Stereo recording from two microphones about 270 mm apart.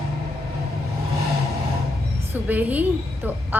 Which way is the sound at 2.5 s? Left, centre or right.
Centre.